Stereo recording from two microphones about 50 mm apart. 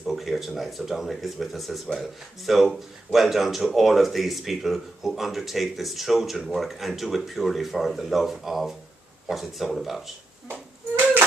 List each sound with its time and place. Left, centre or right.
0.0 s a sound: centre
0.6 s speech: centre
10.5 s music: right